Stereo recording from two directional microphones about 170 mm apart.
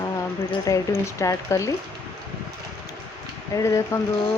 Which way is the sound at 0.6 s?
20° left (ahead or behind).